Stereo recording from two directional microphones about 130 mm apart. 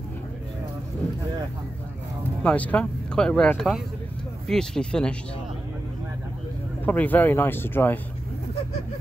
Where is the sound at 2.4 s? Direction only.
10° left (ahead or behind).